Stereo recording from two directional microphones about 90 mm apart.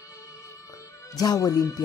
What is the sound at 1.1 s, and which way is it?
Speech, 45° left (ahead or behind).